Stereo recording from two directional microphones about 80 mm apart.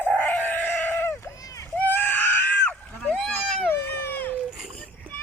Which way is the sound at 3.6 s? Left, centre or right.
Left.